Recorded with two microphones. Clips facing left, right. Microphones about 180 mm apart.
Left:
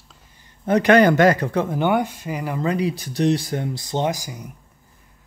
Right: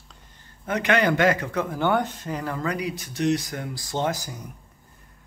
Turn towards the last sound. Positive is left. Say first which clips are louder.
# left 3 dB
turn(degrees=10)  # may be behind; listen again after turning